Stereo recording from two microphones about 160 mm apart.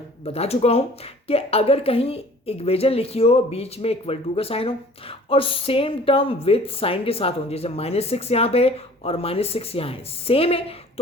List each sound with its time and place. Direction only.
0.3 s a woman's voice: 40° left (ahead or behind)